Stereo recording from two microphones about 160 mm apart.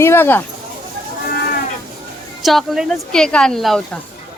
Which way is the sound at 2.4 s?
Centre (ahead or behind).